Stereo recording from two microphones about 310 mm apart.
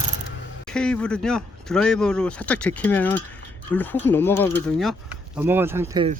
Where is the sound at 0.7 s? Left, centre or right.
Centre.